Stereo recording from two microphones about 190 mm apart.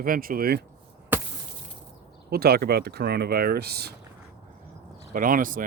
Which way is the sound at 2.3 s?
55° right (ahead or behind).